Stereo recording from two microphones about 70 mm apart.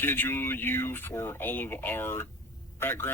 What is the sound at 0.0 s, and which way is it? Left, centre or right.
Speech, left.